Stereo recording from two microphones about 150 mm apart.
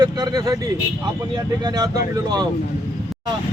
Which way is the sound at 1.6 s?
25° right (ahead or behind).